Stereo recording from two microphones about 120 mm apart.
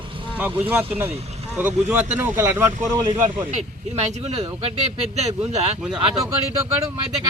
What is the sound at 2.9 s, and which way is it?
Speech, 40° right (ahead or behind).